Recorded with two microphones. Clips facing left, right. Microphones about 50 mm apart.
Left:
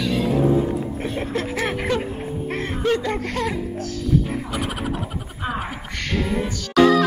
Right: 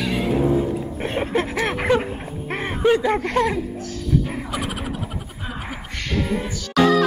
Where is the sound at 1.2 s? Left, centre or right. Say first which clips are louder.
Right 4 dB; centre.